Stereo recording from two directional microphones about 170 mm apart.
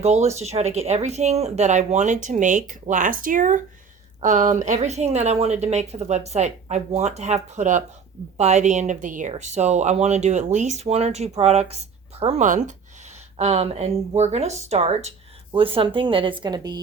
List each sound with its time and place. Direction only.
0.0 s a woman's voice: 40° right (ahead or behind); by 16.8 s 25° right (ahead or behind)